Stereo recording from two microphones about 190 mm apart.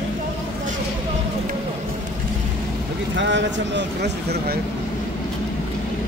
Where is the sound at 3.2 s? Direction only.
70° right (ahead or behind).